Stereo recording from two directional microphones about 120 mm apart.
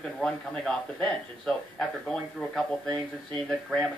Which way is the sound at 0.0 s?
5° left (ahead or behind).